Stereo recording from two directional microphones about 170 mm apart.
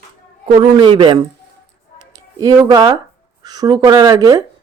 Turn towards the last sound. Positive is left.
turn(degrees=-20)  # may be behind; listen again after turning